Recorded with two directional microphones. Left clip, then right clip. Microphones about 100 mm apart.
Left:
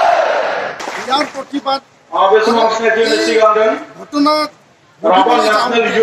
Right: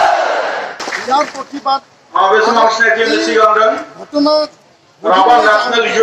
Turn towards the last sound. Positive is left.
turn(degrees=35)  # may be behind; listen again after turning